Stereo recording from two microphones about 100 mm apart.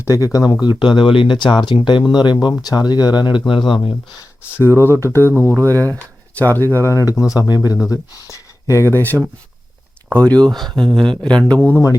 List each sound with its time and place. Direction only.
0.0 s speech: 30° left (ahead or behind)
0.6 s speech: 55° left (ahead or behind)
4.8 s speech: 25° left (ahead or behind)
5.5 s speech: 30° right (ahead or behind)
5.7 s speech: 15° left (ahead or behind)